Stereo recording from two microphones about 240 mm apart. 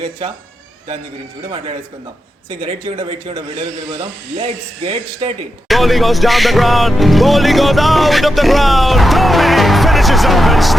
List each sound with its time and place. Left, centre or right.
2.6 s speech: right
5.6 s speech: centre